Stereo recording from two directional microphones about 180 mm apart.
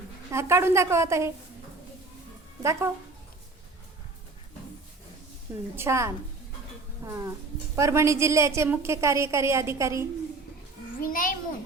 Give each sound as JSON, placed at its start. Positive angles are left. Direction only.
{"t": 0.3, "sound": "a woman's voice", "side_deg": -15}
{"t": 2.6, "sound": "a woman's voice", "side_deg": -15}
{"t": 5.7, "sound": "a woman's voice", "side_deg": -15}
{"t": 11.0, "sound": "a child's voice", "side_deg": 50}